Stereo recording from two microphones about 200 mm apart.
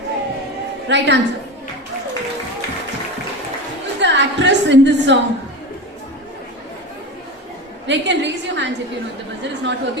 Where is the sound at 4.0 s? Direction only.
60° right (ahead or behind).